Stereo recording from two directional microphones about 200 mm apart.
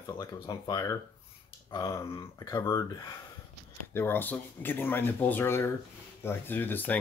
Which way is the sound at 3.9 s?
10° left (ahead or behind).